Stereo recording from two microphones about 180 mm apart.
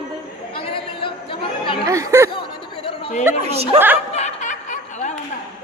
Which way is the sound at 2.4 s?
30° left (ahead or behind).